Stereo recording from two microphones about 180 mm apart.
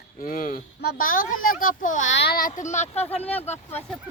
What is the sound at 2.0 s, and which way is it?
Speech, 80° left.